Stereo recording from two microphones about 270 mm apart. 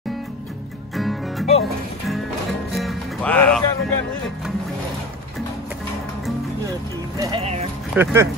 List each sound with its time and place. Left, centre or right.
0.9 s music: centre
7.2 s music: centre
7.9 s speech: centre